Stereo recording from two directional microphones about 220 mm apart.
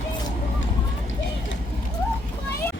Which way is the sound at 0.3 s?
60° left (ahead or behind).